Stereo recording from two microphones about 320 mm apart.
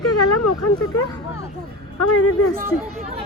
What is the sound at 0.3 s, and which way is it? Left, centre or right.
Speech, left.